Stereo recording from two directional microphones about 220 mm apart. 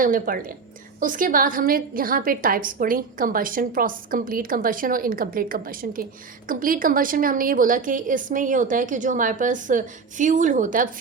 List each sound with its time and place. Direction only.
0.0 s a woman's voice: 40° right (ahead or behind)